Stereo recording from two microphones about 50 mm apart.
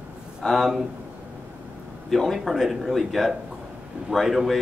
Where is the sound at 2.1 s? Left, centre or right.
Centre.